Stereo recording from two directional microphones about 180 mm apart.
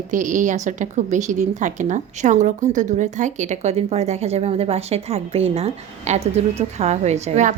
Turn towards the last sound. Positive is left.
turn(degrees=-40)  # may be behind; listen again after turning